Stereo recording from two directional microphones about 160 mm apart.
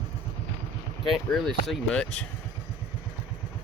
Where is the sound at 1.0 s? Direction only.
Centre (ahead or behind).